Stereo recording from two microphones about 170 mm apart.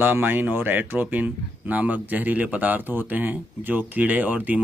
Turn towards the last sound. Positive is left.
turn(degrees=-10)  # may be behind; listen again after turning